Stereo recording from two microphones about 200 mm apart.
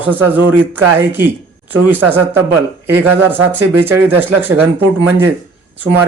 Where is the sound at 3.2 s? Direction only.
10° right (ahead or behind).